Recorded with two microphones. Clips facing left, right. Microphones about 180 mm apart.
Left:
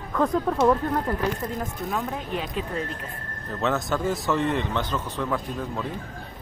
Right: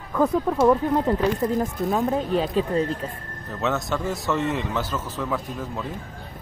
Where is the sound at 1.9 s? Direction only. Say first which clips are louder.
Right 7 dB; 35° right (ahead or behind).